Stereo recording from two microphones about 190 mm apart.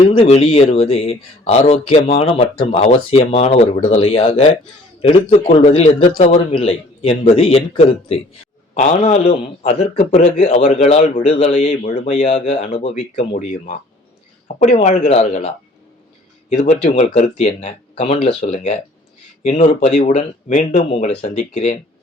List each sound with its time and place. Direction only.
0.0 s a man's voice: 25° left (ahead or behind)